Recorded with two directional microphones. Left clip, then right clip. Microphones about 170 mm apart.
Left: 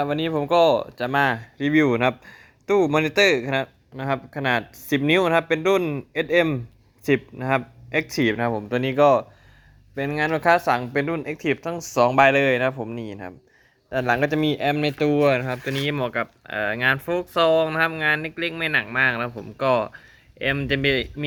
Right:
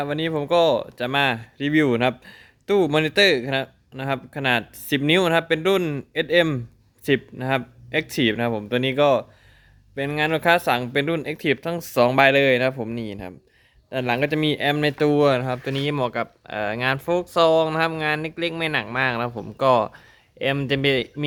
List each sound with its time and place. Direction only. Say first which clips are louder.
0.0 s speech: left 1 dB; 15° right (ahead or behind); by 11.6 s 45° right (ahead or behind)
11.6 s speech: left 1 dB; 60° right (ahead or behind)
12.2 s speech: right 1 dB; 40° right (ahead or behind)
13.9 s speech: left 1 dB; 25° right (ahead or behind)